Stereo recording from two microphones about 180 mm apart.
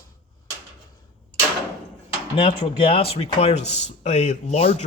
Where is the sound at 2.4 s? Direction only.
30° left (ahead or behind).